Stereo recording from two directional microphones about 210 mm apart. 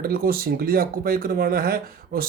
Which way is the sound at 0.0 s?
45° right (ahead or behind).